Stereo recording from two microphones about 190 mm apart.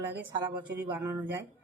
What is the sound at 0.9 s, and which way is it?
Speech, 10° right (ahead or behind).